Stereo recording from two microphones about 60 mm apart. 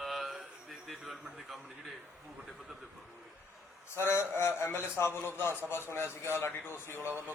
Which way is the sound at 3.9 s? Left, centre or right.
Left.